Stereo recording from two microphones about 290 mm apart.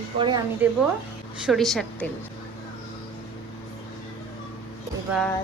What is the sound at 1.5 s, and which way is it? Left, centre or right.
Speech, centre.